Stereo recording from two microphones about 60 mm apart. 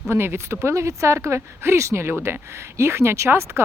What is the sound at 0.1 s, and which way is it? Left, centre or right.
Speech, right.